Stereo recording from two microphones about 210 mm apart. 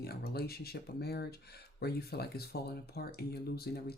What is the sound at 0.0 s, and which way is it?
Speech, 45° left (ahead or behind).